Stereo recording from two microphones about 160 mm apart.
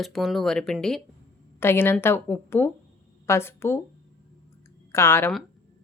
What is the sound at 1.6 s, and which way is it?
A woman's voice, 15° left (ahead or behind).